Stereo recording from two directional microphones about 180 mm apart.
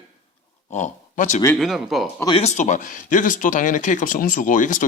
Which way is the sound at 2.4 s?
40° left (ahead or behind).